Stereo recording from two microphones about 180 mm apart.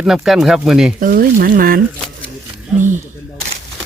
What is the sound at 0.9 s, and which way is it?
Speech, 50° right (ahead or behind).